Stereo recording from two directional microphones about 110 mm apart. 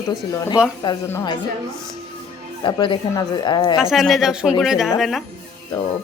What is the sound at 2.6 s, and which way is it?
Speech, 50° left (ahead or behind).